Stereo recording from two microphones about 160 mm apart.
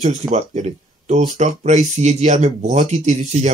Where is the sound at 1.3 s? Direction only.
50° right (ahead or behind).